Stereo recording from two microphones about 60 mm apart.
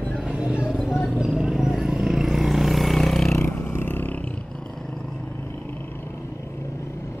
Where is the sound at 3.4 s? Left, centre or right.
Left.